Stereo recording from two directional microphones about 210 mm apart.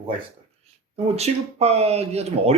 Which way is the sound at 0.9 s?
30° right (ahead or behind).